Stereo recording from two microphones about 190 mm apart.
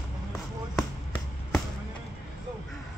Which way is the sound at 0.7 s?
Centre (ahead or behind).